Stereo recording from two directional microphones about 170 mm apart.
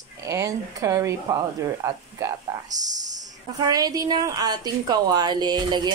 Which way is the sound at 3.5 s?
25° right (ahead or behind).